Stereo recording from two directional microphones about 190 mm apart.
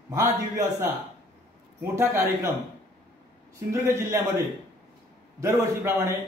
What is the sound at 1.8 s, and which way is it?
Speech, 15° right (ahead or behind).